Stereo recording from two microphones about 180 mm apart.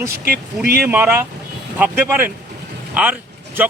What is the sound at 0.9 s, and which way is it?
A man's voice, 10° right (ahead or behind).